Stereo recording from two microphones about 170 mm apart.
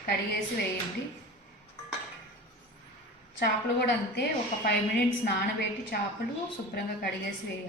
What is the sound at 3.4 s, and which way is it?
Speech, 70° left (ahead or behind).